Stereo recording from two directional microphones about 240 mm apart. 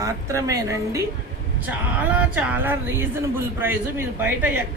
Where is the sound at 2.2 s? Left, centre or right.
Centre.